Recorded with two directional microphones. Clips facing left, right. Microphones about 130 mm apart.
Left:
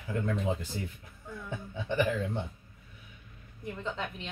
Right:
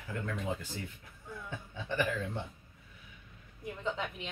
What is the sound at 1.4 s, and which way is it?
Speech, 20° left (ahead or behind).